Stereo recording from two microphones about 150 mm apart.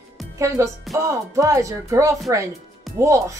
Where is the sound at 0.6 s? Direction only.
20° right (ahead or behind).